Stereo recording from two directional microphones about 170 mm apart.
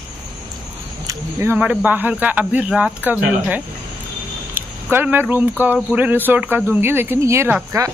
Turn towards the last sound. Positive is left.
turn(degrees=-15)  # may be behind; listen again after turning